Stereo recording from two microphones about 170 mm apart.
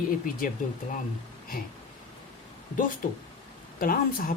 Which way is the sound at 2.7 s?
50° left (ahead or behind).